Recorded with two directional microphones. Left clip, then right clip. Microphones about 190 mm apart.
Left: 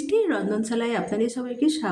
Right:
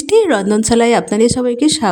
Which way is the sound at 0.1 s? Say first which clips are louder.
Right 11 dB; 60° right (ahead or behind).